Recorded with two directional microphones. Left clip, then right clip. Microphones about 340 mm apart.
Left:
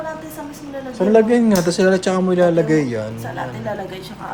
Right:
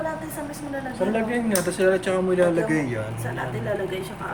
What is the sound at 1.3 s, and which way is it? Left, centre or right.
Speech, centre.